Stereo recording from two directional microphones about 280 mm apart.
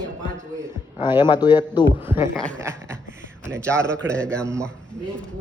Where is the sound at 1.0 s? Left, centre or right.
Centre.